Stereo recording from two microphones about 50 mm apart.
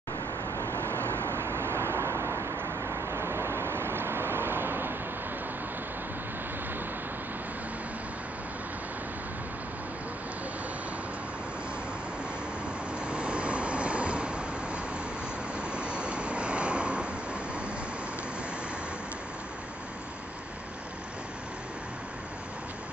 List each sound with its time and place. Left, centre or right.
0.5 s vehicle: left
0.8 s vehicle: right
2.6 s vehicle: right
13.0 s vehicle: right